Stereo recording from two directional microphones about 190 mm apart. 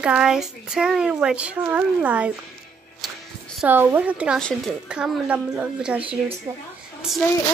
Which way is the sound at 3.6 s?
10° right (ahead or behind).